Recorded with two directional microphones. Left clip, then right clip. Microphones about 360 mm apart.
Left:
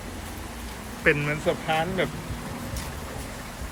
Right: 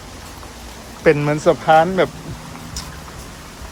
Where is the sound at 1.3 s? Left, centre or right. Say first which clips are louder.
Right 12 dB; right.